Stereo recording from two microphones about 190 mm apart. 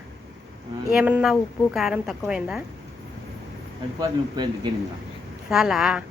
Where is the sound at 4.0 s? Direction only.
20° right (ahead or behind).